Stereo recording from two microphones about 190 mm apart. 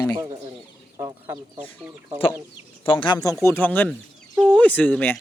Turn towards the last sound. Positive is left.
turn(degrees=10)  # may be behind; listen again after turning